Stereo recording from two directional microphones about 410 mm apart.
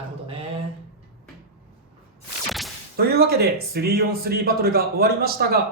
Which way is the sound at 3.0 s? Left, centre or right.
Right.